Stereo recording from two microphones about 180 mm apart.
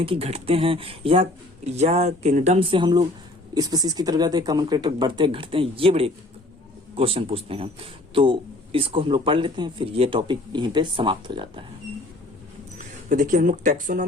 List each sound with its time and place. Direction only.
0.0 s a man's voice: 30° right (ahead or behind)
13.1 s speech: 45° right (ahead or behind)